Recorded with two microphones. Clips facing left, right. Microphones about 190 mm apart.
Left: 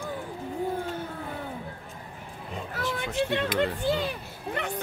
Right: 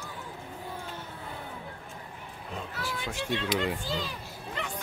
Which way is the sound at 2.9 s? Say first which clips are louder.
Left 5 dB; 55° left (ahead or behind).